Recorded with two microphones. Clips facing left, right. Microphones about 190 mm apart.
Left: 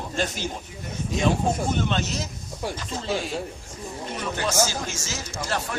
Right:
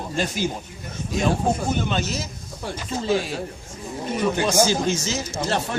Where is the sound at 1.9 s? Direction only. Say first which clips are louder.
Right 1 dB; centre (ahead or behind).